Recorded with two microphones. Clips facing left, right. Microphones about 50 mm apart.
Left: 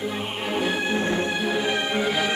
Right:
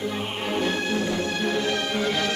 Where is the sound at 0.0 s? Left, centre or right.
Centre.